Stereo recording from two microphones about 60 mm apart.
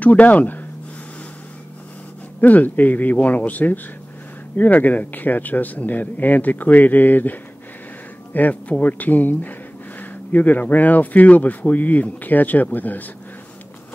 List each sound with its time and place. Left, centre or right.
0.0 s speech: left
2.4 s speech: left